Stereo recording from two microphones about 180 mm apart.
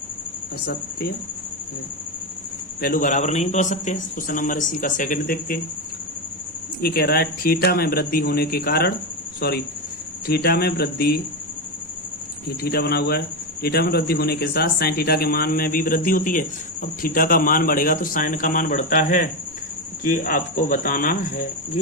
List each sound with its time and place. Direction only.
0.6 s speech: 60° left (ahead or behind)
2.8 s speech: 50° left (ahead or behind)
6.8 s speech: 60° left (ahead or behind)
12.6 s speech: 60° left (ahead or behind)